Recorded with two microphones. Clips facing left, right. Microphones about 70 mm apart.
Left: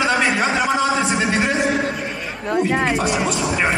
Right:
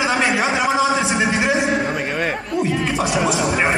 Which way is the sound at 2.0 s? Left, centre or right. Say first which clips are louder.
Right 6 dB; right.